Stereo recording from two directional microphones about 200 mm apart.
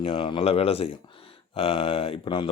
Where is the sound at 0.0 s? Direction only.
25° left (ahead or behind).